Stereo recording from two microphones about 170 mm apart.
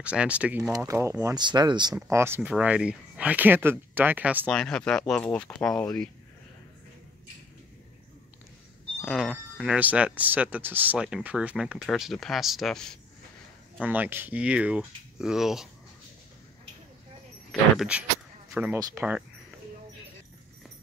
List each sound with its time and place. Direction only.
0.0 s speech: 5° right (ahead or behind)
0.7 s speech: 20° right (ahead or behind)
2.0 s speech: 15° right (ahead or behind)
4.5 s speech: 5° left (ahead or behind)
9.0 s speech: centre (ahead or behind)
13.7 s speech: 10° right (ahead or behind)
17.5 s speech: 5° right (ahead or behind)